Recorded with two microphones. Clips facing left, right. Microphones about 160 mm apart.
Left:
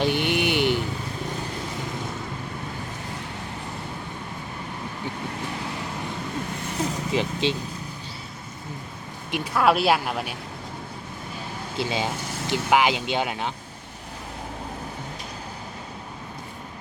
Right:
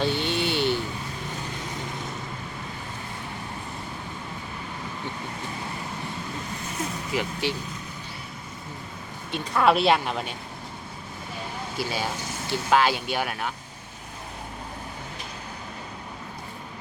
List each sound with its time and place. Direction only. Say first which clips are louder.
0.0 s a sound: left 3 dB; 15° left (ahead or behind)
7.1 s speech: left 3 dB; 25° left (ahead or behind)
9.3 s speech: even; 5° left (ahead or behind)
11.8 s speech: left 3 dB; 20° left (ahead or behind)